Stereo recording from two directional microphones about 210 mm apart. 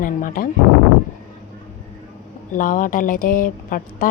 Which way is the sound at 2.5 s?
40° left (ahead or behind).